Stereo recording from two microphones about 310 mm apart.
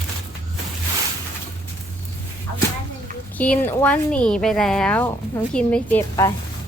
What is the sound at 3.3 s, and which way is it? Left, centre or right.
Speech, centre.